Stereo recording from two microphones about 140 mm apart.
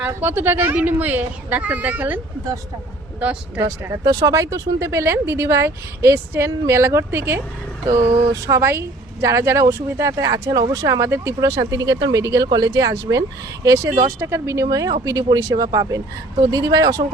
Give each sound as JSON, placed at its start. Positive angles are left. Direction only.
{"t": 0.0, "sound": "a woman's voice", "side_deg": -15}
{"t": 3.6, "sound": "a woman's voice", "side_deg": -25}
{"t": 8.4, "sound": "a woman's voice", "side_deg": -20}